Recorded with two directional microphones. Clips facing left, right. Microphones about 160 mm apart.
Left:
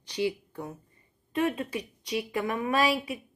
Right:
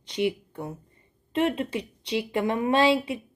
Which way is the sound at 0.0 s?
20° right (ahead or behind).